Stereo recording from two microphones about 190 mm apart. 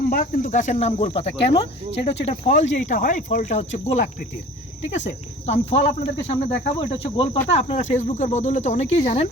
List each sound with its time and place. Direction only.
0.1 s speech: 50° left (ahead or behind); by 9.3 s 30° left (ahead or behind)